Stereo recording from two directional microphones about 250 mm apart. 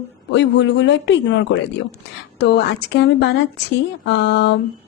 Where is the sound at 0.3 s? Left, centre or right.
Left.